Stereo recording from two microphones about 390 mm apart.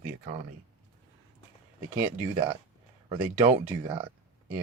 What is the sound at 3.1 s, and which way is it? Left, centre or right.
Speech, centre.